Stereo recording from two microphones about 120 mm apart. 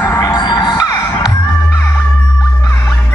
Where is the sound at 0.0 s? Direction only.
25° left (ahead or behind).